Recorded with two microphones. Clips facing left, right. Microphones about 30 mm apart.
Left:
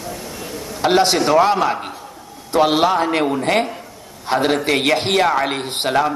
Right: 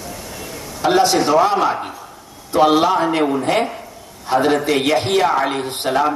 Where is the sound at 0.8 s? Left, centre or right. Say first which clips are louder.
Right 1 dB; left.